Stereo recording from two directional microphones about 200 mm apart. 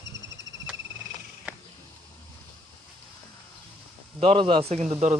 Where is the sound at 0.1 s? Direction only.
65° right (ahead or behind).